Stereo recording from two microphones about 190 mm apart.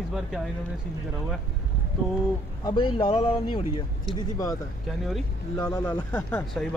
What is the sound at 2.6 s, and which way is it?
Speech, 25° left (ahead or behind).